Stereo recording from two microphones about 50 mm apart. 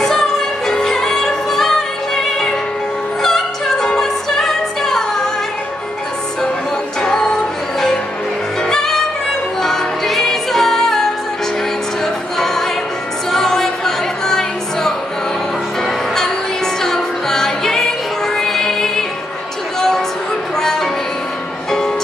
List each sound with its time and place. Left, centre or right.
0.0 s music: centre
3.2 s music: centre
7.0 s music: centre
8.6 s music: centre
13.3 s music: centre
16.8 s music: centre
20.5 s music: centre